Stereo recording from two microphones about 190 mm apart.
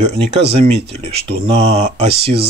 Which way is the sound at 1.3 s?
30° right (ahead or behind).